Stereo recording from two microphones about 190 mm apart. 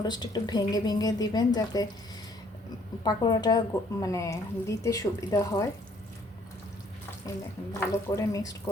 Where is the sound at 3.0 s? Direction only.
20° left (ahead or behind).